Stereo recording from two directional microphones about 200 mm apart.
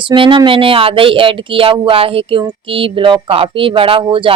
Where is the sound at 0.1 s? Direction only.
25° right (ahead or behind).